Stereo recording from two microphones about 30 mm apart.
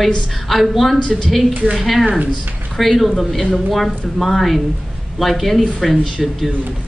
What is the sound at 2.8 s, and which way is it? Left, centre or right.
A woman's voice, centre.